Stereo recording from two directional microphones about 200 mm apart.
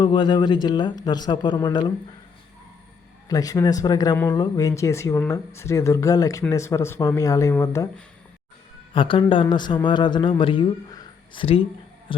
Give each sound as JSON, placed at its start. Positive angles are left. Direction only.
{"t": 0.0, "sound": "speech", "side_deg": 25}
{"t": 3.2, "sound": "speech", "side_deg": 20}
{"t": 8.9, "sound": "a man's voice", "side_deg": 25}